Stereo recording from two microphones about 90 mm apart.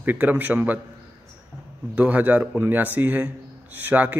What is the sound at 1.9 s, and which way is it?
Speech, 15° right (ahead or behind).